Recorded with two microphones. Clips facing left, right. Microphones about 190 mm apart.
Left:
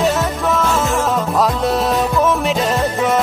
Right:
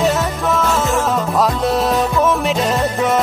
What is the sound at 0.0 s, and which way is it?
Music, centre (ahead or behind).